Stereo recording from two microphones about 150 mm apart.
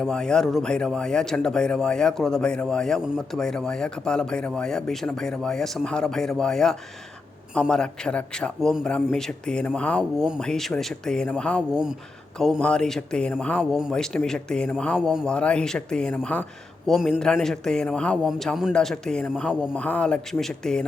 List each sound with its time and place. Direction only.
0.0 s speech: 5° left (ahead or behind)